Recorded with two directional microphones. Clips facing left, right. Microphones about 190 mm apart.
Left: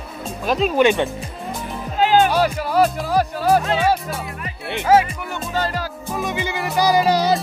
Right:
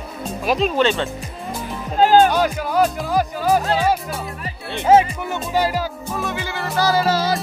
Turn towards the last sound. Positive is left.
turn(degrees=15)  # may be behind; listen again after turning